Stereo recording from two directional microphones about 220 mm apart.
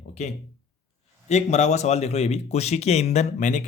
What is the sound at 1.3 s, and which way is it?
Speech, 30° left (ahead or behind).